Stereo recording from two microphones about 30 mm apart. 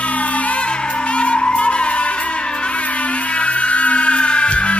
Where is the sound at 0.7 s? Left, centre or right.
Left.